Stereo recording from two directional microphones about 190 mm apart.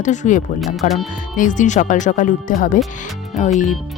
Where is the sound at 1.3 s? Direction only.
40° left (ahead or behind).